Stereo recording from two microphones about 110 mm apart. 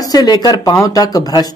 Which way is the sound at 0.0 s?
35° left (ahead or behind).